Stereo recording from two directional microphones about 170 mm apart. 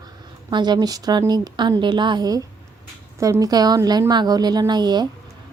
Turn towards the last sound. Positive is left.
turn(degrees=-25)  # may be behind; listen again after turning